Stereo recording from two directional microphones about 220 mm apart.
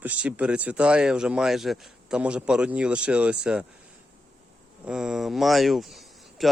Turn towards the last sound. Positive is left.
turn(degrees=0)  # may be behind; listen again after turning